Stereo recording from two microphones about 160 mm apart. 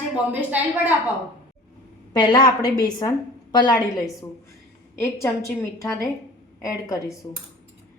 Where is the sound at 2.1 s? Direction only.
25° left (ahead or behind).